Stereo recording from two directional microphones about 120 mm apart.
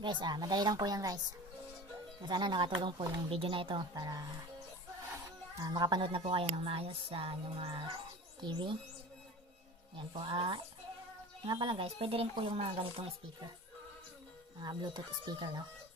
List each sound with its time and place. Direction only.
0.0 s speech: 40° right (ahead or behind)
2.2 s speech: 40° right (ahead or behind)
5.6 s speech: 35° right (ahead or behind)
6.0 s speech: 50° right (ahead or behind)
9.9 s speech: 45° right (ahead or behind)
14.6 s speech: 35° right (ahead or behind)